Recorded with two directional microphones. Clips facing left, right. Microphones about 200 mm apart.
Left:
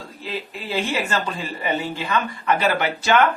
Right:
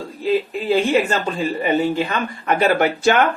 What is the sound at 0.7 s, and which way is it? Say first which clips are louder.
Speech: right 7 dB; 50° right (ahead or behind).